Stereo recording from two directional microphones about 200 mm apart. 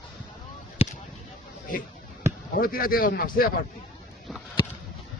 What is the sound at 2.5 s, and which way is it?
Speech, 45° left (ahead or behind).